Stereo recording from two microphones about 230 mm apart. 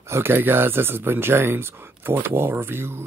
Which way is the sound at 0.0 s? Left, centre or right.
Centre.